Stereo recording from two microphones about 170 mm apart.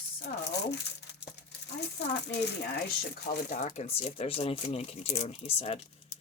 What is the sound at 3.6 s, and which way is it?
Speech, 35° left (ahead or behind).